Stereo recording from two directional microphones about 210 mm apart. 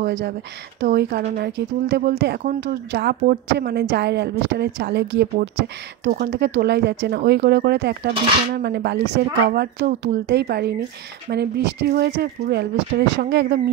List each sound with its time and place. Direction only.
0.0 s speech: 50° right (ahead or behind)